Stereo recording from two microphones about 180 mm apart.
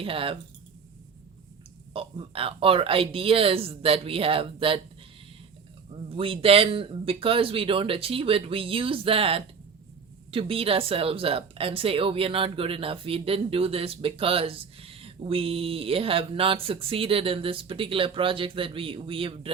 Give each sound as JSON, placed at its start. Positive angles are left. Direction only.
{"t": 0.0, "sound": "speech", "side_deg": -30}
{"t": 1.9, "sound": "speech", "side_deg": -30}
{"t": 6.1, "sound": "speech", "side_deg": -30}